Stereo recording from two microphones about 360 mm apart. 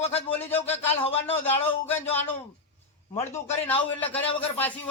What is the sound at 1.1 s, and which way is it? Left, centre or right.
Speech, centre.